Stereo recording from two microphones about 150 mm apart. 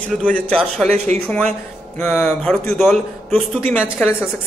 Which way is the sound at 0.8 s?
50° right (ahead or behind).